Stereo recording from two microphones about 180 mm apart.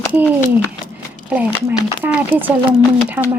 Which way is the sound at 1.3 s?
10° right (ahead or behind).